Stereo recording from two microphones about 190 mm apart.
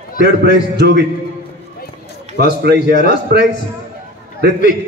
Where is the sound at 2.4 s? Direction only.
60° right (ahead or behind).